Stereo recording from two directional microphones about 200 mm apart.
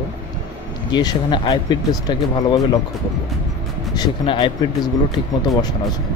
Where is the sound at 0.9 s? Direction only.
20° left (ahead or behind).